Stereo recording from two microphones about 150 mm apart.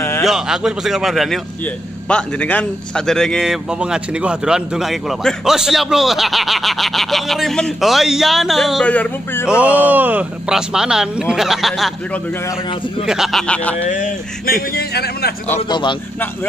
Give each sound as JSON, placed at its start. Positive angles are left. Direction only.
{"t": 0.2, "sound": "a man's voice", "side_deg": 0}
{"t": 9.6, "sound": "a man's voice", "side_deg": -10}
{"t": 13.0, "sound": "a man's voice", "side_deg": -5}
{"t": 13.8, "sound": "speech", "side_deg": 60}
{"t": 15.7, "sound": "a man's voice", "side_deg": 30}